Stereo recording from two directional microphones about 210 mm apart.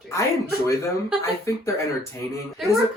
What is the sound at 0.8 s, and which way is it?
Speech, 15° left (ahead or behind).